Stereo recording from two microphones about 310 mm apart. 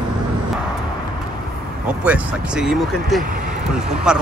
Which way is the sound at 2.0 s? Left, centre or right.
Centre.